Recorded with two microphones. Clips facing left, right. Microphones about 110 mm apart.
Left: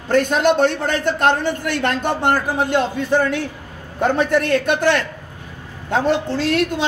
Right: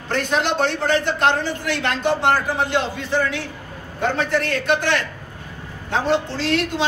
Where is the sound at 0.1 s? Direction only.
50° left (ahead or behind).